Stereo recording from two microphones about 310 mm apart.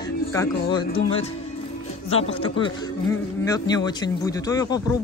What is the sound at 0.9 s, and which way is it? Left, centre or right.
Speech, centre.